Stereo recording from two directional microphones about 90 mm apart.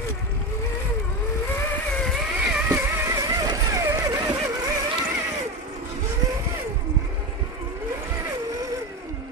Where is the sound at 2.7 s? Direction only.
30° right (ahead or behind); by 4.7 s 45° right (ahead or behind).